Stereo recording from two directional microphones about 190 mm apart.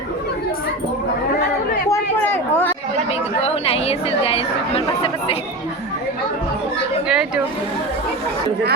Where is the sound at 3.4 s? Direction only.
30° left (ahead or behind).